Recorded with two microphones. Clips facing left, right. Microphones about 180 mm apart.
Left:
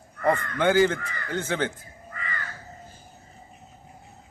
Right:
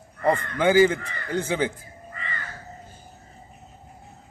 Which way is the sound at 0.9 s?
25° right (ahead or behind).